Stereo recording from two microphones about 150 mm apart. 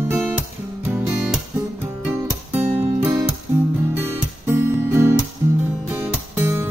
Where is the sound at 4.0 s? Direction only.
15° right (ahead or behind).